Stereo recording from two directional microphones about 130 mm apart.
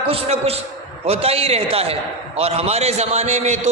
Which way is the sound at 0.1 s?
50° right (ahead or behind).